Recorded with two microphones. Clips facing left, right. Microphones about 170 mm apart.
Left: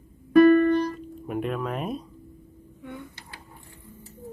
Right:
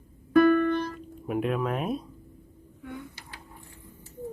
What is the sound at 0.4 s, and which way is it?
Music, 10° left (ahead or behind).